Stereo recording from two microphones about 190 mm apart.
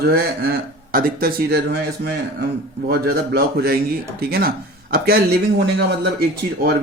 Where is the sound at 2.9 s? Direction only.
55° right (ahead or behind).